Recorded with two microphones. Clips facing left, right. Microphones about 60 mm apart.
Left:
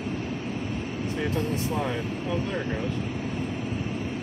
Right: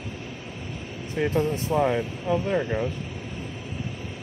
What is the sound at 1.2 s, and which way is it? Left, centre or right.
Speech, right.